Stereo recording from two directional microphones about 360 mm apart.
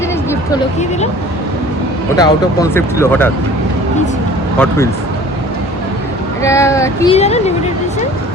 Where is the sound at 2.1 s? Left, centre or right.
Centre.